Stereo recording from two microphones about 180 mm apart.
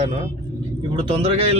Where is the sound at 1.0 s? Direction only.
35° right (ahead or behind).